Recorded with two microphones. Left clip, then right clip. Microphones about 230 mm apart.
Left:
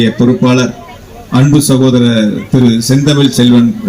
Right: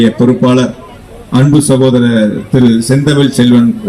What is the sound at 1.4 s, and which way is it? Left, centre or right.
A man's voice, left.